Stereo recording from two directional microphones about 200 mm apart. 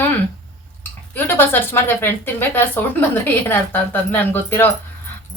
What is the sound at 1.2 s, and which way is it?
Speech, 10° left (ahead or behind).